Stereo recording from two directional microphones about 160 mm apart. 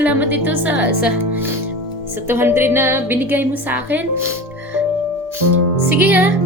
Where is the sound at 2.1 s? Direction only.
15° right (ahead or behind).